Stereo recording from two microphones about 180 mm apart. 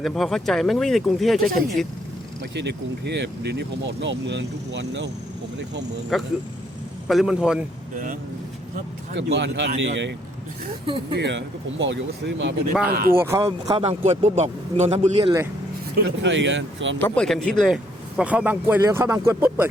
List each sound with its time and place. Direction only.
0.0 s speech: centre (ahead or behind)
2.6 s speech: 70° right (ahead or behind)
6.1 s speech: centre (ahead or behind)
9.1 s speech: 80° right
12.9 s speech: 55° right (ahead or behind)
13.1 s speech: 15° right (ahead or behind)
13.8 s a man's voice: 35° right (ahead or behind)
16.0 s speech: 90° right
17.0 s speech: 5° left (ahead or behind); by 19.6 s 15° right (ahead or behind)